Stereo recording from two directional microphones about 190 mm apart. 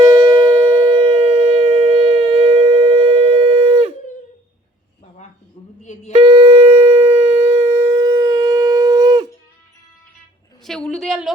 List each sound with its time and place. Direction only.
0.1 s shofar: 25° right (ahead or behind)
5.8 s busy signal: 40° left (ahead or behind)
6.1 s shofar: 30° right (ahead or behind)
10.6 s a sound: 5° left (ahead or behind)